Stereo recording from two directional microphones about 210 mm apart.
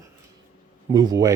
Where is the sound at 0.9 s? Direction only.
15° right (ahead or behind).